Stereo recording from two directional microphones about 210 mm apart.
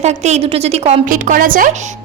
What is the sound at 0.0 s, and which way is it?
A woman's voice, 30° right (ahead or behind).